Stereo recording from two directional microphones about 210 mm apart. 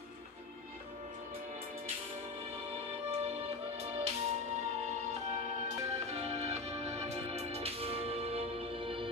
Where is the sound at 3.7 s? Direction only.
30° right (ahead or behind).